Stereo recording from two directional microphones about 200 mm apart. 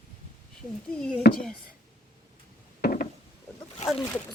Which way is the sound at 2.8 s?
45° left (ahead or behind).